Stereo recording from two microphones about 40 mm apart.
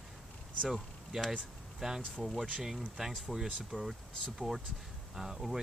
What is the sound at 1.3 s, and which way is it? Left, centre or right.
Speech, centre.